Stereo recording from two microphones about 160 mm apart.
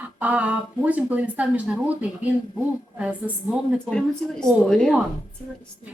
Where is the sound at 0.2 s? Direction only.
10° right (ahead or behind).